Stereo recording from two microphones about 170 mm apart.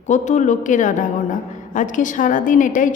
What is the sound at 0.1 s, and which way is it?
A woman's voice, 45° left (ahead or behind).